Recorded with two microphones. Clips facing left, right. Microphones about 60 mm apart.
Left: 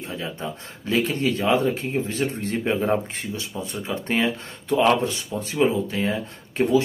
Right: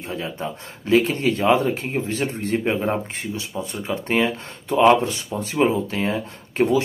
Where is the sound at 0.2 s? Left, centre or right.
Centre.